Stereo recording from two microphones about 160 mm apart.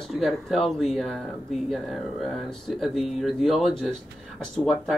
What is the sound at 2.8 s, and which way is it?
Speech, centre (ahead or behind).